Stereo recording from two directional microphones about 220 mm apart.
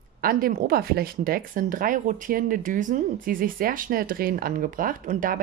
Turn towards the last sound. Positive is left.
turn(degrees=-35)  # may be behind; listen again after turning